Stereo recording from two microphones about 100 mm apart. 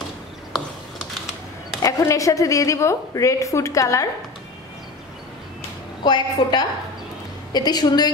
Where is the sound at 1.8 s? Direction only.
35° left (ahead or behind).